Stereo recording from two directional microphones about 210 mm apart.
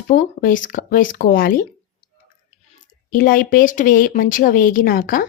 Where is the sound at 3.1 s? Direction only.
40° left (ahead or behind).